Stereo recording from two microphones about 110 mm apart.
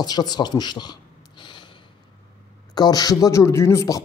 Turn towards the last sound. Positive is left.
turn(degrees=25)  # may be behind; listen again after turning